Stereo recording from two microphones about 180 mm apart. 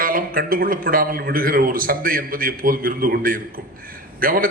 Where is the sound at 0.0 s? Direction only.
50° right (ahead or behind).